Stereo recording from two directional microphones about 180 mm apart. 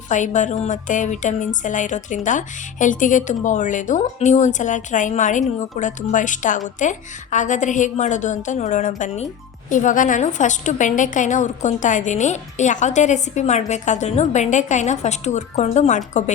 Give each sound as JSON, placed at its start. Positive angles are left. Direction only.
{"t": 0.1, "sound": "a woman's voice", "side_deg": 45}